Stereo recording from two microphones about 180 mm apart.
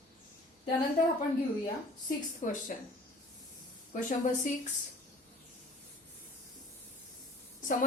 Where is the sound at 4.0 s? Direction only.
45° left (ahead or behind).